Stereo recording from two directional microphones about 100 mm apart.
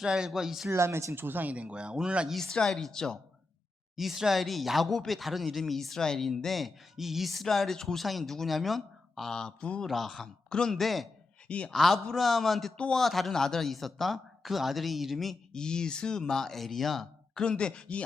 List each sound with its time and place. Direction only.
0.0 s a man's voice: 5° right (ahead or behind)
0.7 s speech: 25° right (ahead or behind); by 2.3 s 10° right (ahead or behind)
2.3 s a man's voice: 5° left (ahead or behind)
11.4 s a man's voice: 10° left (ahead or behind)